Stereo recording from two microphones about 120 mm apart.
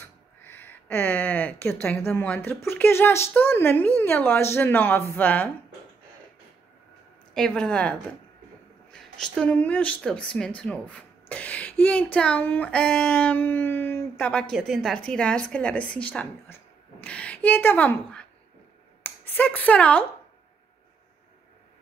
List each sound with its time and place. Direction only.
0.4 s a sound: 15° left (ahead or behind)
1.7 s a woman's voice: 20° left (ahead or behind)
7.3 s a woman's voice: 5° left (ahead or behind)
14.5 s a woman's voice: centre (ahead or behind)